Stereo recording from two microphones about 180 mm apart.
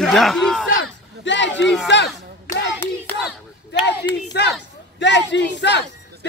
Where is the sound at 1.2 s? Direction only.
90° left.